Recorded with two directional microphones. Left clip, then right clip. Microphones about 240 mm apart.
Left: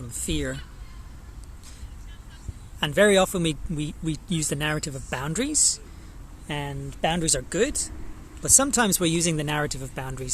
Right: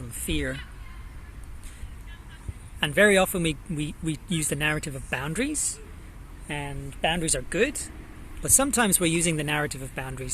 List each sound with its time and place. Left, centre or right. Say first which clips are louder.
0.3 s speech: even; centre
2.8 s speech: left 1 dB; centre